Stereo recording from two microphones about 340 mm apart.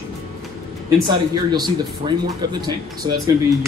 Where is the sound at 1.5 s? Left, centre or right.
Centre.